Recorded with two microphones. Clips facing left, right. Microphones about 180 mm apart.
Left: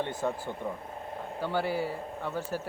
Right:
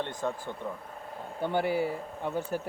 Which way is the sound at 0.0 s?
10° left (ahead or behind).